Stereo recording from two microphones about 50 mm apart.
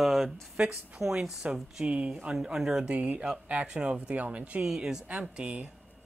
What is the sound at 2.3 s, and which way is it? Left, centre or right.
Speech, centre.